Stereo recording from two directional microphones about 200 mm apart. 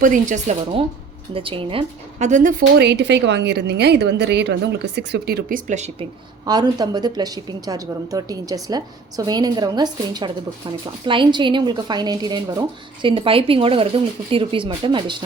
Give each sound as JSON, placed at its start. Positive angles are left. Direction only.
{"t": 0.0, "sound": "speech", "side_deg": -40}
{"t": 6.4, "sound": "speech", "side_deg": -20}